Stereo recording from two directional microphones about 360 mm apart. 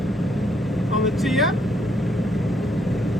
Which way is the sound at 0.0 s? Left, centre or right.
Centre.